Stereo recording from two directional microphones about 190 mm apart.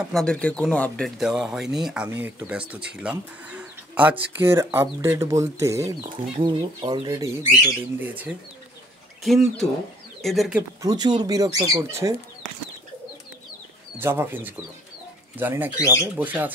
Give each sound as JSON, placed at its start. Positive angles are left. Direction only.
{"t": 0.0, "sound": "speech", "side_deg": 0}
{"t": 8.0, "sound": "speech", "side_deg": -10}
{"t": 10.8, "sound": "speech", "side_deg": -20}
{"t": 13.9, "sound": "speech", "side_deg": -10}
{"t": 15.8, "sound": "speech", "side_deg": 15}
{"t": 16.2, "sound": "speech", "side_deg": -10}